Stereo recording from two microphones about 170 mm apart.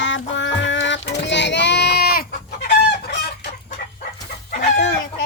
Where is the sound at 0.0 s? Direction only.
90° left.